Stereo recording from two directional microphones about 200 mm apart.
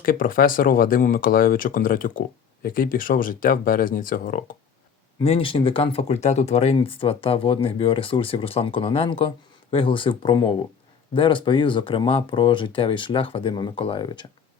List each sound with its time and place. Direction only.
0.0 s speech: 45° left (ahead or behind)
5.2 s speech: 30° left (ahead or behind)